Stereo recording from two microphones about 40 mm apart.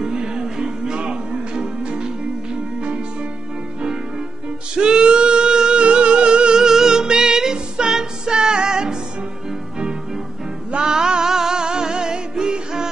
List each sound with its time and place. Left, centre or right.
0.0 s music: centre
4.7 s singing: right
10.7 s music: centre